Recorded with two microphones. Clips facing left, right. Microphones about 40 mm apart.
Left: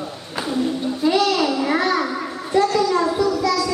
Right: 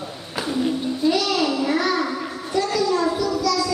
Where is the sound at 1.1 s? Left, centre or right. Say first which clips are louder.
Left 4 dB; centre.